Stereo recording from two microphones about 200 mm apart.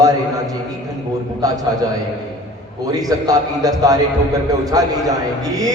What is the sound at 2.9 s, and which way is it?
A man's voice, 20° right (ahead or behind).